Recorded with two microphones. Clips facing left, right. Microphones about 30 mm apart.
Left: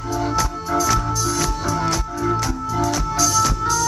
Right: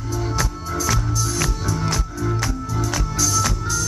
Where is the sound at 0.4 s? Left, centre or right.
Centre.